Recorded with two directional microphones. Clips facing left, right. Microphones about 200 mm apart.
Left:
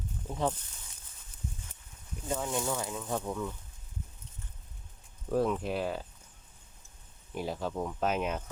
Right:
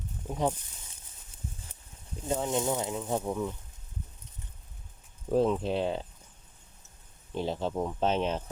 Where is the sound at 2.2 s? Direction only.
25° right (ahead or behind).